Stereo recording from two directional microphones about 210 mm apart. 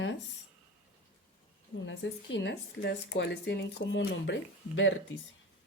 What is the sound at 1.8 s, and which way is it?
Speech, 60° left (ahead or behind).